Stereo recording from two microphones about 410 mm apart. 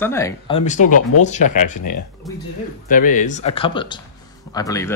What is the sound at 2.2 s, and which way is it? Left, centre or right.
Speech, centre.